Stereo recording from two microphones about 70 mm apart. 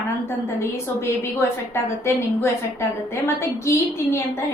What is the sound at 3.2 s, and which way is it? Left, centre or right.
Speech, left.